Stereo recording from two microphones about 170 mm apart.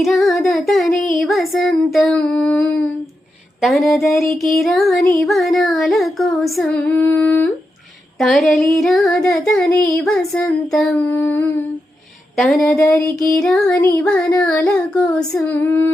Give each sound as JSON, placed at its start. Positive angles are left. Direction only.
{"t": 0.0, "sound": "child singing", "side_deg": 0}
{"t": 12.4, "sound": "child singing", "side_deg": 0}
{"t": 12.7, "sound": "child singing", "side_deg": 15}